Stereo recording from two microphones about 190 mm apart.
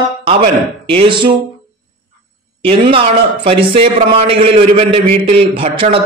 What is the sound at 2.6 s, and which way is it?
A man's voice, 30° right (ahead or behind).